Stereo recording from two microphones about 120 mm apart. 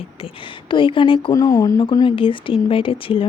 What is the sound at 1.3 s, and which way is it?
Speech, 30° left (ahead or behind).